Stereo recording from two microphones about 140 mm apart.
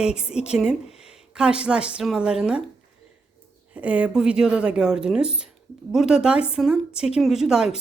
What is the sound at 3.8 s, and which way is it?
A woman's voice, 10° right (ahead or behind).